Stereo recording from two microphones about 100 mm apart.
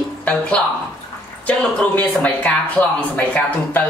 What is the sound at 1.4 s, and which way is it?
Speech, 15° left (ahead or behind).